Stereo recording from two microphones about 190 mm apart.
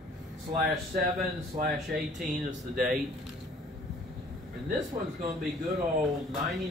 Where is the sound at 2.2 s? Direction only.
45° right (ahead or behind).